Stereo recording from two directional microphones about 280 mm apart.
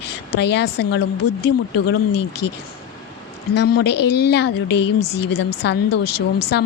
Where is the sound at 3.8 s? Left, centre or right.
Left.